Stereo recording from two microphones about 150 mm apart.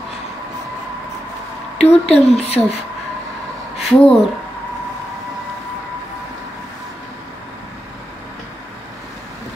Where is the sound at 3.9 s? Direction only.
5° left (ahead or behind).